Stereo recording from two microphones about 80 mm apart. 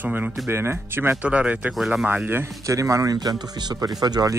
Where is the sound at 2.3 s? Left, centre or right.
Right.